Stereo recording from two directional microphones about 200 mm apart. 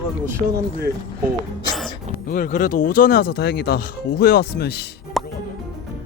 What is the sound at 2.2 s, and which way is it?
Speech, 45° left (ahead or behind).